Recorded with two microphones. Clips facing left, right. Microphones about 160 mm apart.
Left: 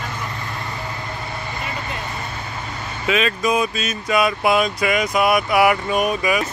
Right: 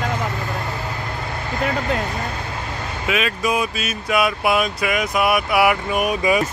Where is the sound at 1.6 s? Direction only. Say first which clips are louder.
Right 12 dB; 90° right.